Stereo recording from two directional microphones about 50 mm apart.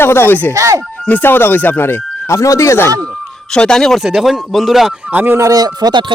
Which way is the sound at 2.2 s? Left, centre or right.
Left.